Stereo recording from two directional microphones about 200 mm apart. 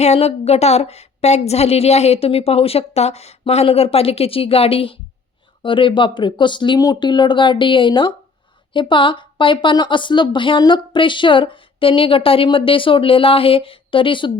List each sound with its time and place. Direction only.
0.0 s a woman's voice: 30° left (ahead or behind)